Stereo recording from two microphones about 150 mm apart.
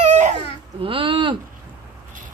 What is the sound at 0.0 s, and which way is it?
Baby cry, 50° right (ahead or behind).